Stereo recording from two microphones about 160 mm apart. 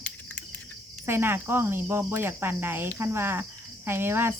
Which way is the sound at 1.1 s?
15° right (ahead or behind).